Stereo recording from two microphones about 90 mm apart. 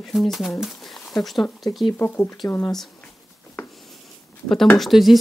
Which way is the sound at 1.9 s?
20° left (ahead or behind).